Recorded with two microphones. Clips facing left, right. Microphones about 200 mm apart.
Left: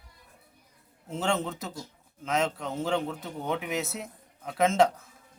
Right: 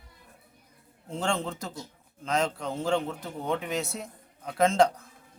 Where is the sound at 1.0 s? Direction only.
5° left (ahead or behind).